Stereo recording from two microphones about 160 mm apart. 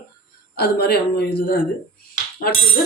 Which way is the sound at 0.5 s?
85° left.